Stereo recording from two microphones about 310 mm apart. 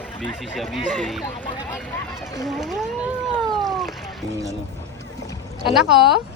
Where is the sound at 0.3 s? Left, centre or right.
Centre.